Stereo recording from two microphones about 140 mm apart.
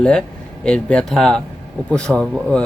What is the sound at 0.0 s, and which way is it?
Speech, 5° left (ahead or behind).